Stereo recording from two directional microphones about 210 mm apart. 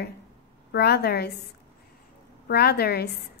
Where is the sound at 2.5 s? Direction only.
50° left (ahead or behind).